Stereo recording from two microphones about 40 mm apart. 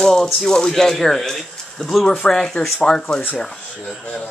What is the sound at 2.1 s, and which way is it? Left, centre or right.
Speech, centre.